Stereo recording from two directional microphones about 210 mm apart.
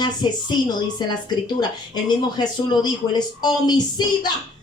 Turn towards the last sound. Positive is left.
turn(degrees=20)  # may be behind; listen again after turning